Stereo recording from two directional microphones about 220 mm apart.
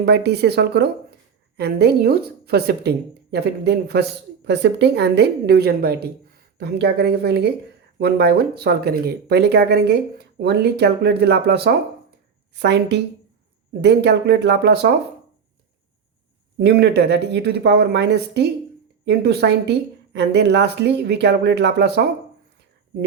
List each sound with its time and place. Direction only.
0.0 s a woman's voice: 50° right (ahead or behind)
16.6 s a woman's voice: 50° right (ahead or behind)